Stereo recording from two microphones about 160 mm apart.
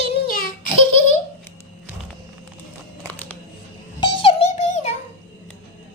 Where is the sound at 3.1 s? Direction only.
10° left (ahead or behind).